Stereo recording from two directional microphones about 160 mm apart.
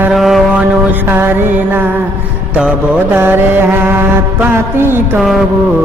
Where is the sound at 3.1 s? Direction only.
15° right (ahead or behind).